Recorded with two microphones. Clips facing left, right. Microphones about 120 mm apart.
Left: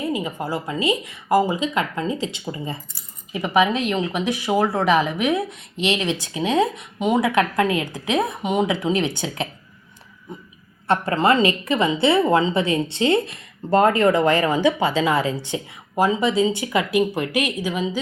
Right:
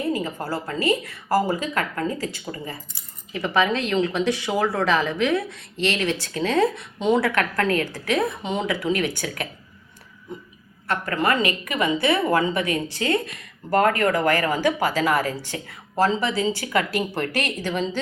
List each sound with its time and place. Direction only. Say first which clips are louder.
0.1 s a woman's voice: left 1 dB; 15° left (ahead or behind)
3.3 s speech: left 3 dB; 15° left (ahead or behind)
10.8 s a woman's voice: left 5 dB; 30° left (ahead or behind); by 18.0 s 10° left (ahead or behind)